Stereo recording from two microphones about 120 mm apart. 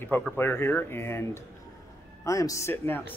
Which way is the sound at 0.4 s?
20° left (ahead or behind).